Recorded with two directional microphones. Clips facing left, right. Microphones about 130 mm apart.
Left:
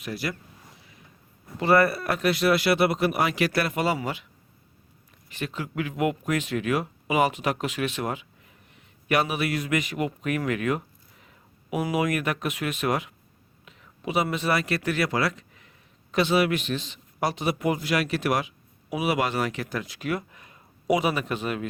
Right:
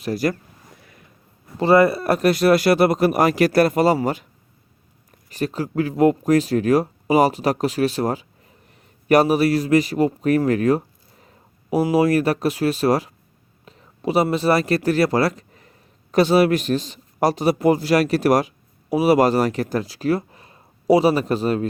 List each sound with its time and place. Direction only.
0.0 s speech: 40° right (ahead or behind)
0.8 s a sound: 55° right (ahead or behind)
1.5 s speech: 25° right (ahead or behind)
2.0 s speech: 40° right (ahead or behind)
5.3 s speech: 40° right (ahead or behind)